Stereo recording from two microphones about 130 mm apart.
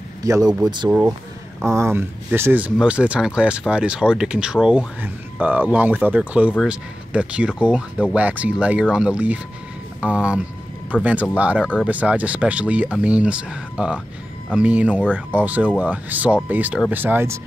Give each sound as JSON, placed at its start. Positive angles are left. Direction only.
{"t": 0.2, "sound": "speech", "side_deg": -25}
{"t": 0.8, "sound": "speech", "side_deg": -15}